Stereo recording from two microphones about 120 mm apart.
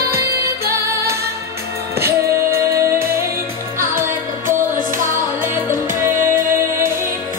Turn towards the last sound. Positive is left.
turn(degrees=-20)  # may be behind; listen again after turning